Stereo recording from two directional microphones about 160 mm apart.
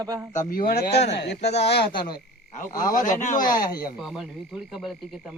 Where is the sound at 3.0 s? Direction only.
50° left (ahead or behind).